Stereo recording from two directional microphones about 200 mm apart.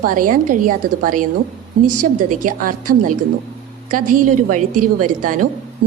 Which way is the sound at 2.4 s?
45° right (ahead or behind).